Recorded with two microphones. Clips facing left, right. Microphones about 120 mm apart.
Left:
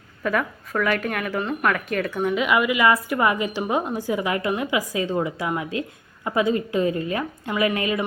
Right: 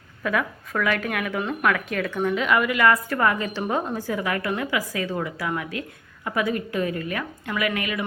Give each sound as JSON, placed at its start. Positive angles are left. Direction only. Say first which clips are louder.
{"t": 0.2, "sound": "a woman's voice", "louder": "left 1 dB", "side_deg": 0}